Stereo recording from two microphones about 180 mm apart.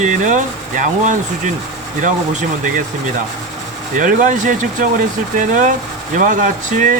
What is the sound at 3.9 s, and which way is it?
Speech, 45° right (ahead or behind).